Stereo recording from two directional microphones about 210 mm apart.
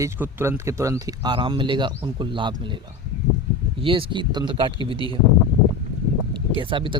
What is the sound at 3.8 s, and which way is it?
Speech, 25° right (ahead or behind).